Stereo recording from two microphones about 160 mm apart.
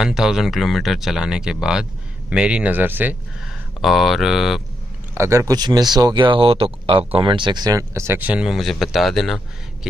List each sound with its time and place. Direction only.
0.0 s speech: 5° right (ahead or behind)
3.8 s speech: centre (ahead or behind)
5.1 s speech: 15° right (ahead or behind); by 9.4 s centre (ahead or behind)